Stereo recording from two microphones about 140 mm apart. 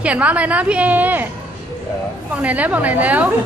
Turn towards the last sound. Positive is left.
turn(degrees=-10)  # may be behind; listen again after turning